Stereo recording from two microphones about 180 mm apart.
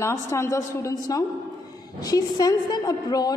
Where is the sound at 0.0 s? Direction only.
15° left (ahead or behind).